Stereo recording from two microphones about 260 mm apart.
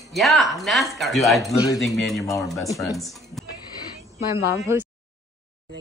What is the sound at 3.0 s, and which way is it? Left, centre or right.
Speech, centre.